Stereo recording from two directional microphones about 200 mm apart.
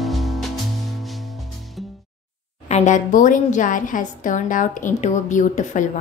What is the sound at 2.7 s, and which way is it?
A woman's voice, 35° left (ahead or behind).